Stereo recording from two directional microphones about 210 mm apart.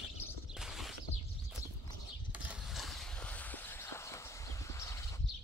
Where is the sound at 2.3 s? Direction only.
5° right (ahead or behind); by 5.0 s 15° left (ahead or behind).